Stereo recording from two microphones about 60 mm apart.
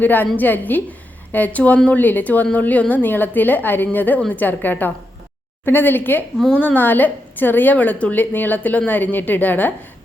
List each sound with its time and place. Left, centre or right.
0.0 s a woman's voice: left